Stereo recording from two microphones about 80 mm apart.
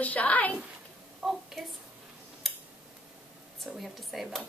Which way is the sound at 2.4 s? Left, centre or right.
Centre.